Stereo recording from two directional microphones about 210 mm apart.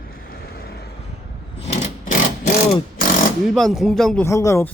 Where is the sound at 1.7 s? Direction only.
35° left (ahead or behind).